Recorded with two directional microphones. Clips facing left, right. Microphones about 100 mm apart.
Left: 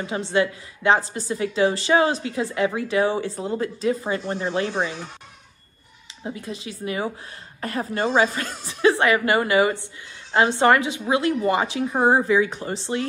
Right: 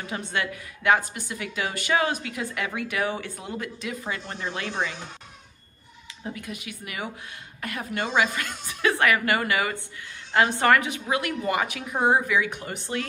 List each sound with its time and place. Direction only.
0.0 s a woman's voice: 25° left (ahead or behind)
6.2 s a woman's voice: 25° left (ahead or behind)